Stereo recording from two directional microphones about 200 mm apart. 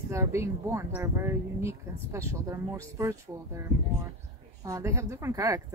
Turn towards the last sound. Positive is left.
turn(degrees=-15)  # may be behind; listen again after turning